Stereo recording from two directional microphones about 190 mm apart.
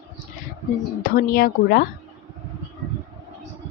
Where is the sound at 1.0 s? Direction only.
45° left (ahead or behind).